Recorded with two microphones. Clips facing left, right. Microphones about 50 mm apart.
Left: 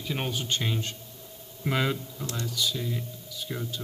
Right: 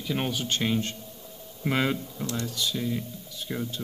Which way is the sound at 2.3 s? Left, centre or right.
Right.